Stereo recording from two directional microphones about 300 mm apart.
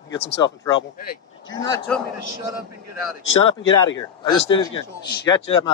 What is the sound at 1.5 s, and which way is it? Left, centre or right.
Speech, centre.